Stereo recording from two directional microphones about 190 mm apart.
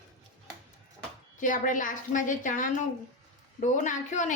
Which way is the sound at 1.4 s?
45° left (ahead or behind).